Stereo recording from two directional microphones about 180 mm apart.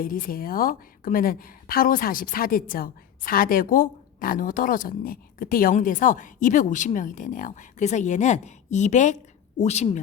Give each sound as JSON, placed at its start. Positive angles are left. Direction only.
{"t": 0.0, "sound": "a woman's voice", "side_deg": 50}